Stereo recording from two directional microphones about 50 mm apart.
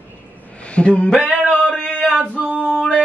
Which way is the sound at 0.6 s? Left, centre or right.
Left.